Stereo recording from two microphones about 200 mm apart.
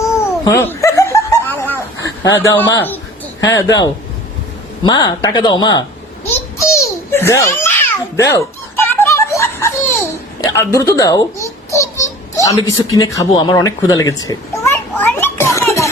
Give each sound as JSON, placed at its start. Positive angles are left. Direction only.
{"t": 0.0, "sound": "giggle", "side_deg": 15}
{"t": 2.2, "sound": "speech", "side_deg": 15}
{"t": 4.9, "sound": "speech", "side_deg": 20}
{"t": 6.3, "sound": "babbling", "side_deg": 15}
{"t": 12.4, "sound": "a sound", "side_deg": 20}